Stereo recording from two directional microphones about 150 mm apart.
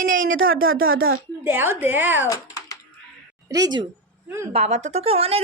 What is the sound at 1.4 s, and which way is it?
Speech, 15° right (ahead or behind).